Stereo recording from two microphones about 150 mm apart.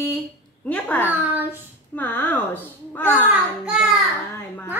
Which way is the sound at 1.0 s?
10° right (ahead or behind).